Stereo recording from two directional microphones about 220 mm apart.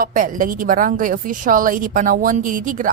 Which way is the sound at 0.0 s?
40° right (ahead or behind).